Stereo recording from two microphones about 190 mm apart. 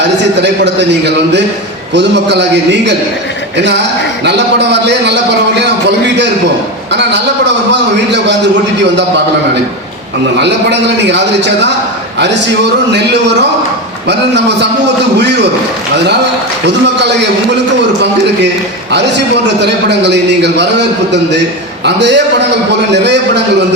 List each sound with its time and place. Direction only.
0.4 s a man's voice: 65° right (ahead or behind)
4.2 s a man's voice: 65° right (ahead or behind)
6.9 s a man's voice: 65° right (ahead or behind)
10.3 s a man's voice: 65° right (ahead or behind)
12.9 s a man's voice: 65° right (ahead or behind)
16.6 s a man's voice: 65° right (ahead or behind)
18.9 s a man's voice: 65° right (ahead or behind)